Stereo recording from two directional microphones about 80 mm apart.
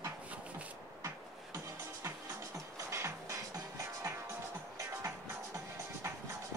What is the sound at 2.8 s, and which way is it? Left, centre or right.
Music, right.